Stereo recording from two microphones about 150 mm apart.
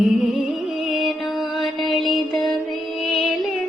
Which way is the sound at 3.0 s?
Centre (ahead or behind).